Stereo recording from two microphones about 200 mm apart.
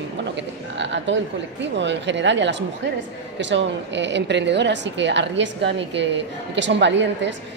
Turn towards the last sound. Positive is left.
turn(degrees=-60)  # may be behind; listen again after turning